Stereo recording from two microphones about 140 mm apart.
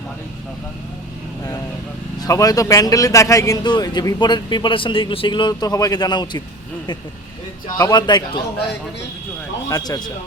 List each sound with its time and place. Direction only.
2.2 s a man's voice: 25° left (ahead or behind)
7.8 s a man's voice: 30° left (ahead or behind)
9.6 s a man's voice: 25° left (ahead or behind)